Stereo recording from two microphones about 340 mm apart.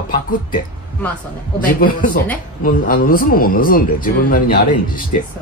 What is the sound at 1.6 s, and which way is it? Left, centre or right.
Speech, left.